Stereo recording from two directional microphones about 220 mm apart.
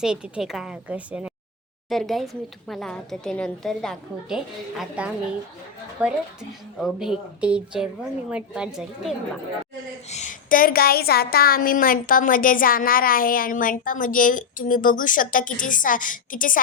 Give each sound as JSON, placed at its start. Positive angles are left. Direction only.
{"t": 0.0, "sound": "a woman's voice", "side_deg": -5}
{"t": 10.1, "sound": "a woman's voice", "side_deg": 35}